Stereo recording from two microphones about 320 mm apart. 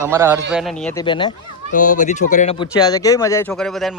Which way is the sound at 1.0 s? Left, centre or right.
Centre.